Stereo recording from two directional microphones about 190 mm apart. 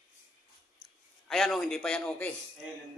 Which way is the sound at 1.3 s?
Centre (ahead or behind).